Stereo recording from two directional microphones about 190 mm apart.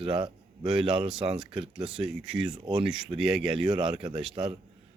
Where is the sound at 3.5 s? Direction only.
25° right (ahead or behind).